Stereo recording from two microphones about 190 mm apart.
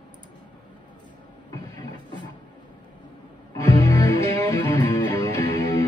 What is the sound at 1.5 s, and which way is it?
Vehicle, 20° left (ahead or behind).